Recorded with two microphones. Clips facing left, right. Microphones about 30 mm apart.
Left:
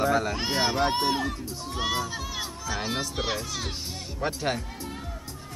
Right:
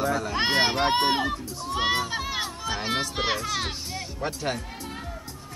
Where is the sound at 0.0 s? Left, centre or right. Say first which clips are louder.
Left 2 dB; centre.